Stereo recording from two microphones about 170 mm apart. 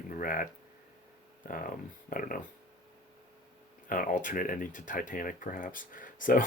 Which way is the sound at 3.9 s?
50° left (ahead or behind).